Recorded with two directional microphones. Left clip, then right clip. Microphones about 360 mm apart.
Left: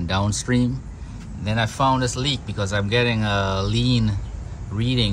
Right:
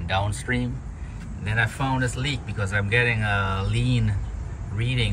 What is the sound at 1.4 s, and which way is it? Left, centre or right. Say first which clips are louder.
Speech: left 5 dB; centre.